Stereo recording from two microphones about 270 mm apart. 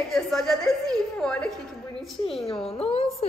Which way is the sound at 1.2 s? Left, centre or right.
Centre.